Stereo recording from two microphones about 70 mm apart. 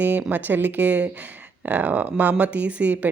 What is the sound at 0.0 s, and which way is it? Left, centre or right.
Speech, right.